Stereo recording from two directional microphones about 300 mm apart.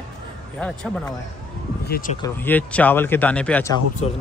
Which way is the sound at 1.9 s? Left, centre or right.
Left.